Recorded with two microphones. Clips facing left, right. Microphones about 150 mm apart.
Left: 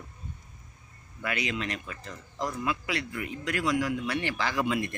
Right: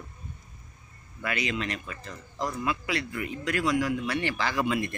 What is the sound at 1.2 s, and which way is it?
Speech, 15° left (ahead or behind).